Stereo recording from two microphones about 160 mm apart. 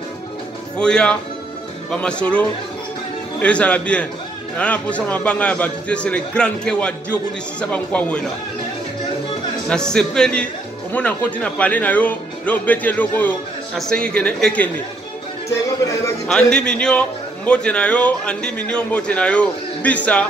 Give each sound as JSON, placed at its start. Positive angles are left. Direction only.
{"t": 0.7, "sound": "a man's voice", "side_deg": 5}
{"t": 9.7, "sound": "speech", "side_deg": 5}
{"t": 15.8, "sound": "a man's voice", "side_deg": 20}
{"t": 16.3, "sound": "a man's voice", "side_deg": 5}